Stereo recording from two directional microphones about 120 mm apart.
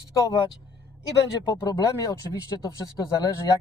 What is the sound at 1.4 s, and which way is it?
Speech, 30° left (ahead or behind).